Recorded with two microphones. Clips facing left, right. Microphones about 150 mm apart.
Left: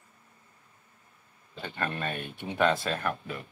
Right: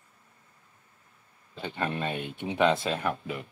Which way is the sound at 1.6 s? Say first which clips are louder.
Right 2 dB; 15° right (ahead or behind).